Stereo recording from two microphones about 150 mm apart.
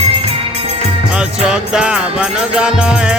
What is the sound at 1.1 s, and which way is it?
Music, 5° right (ahead or behind).